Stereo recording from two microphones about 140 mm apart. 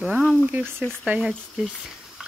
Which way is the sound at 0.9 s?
10° right (ahead or behind).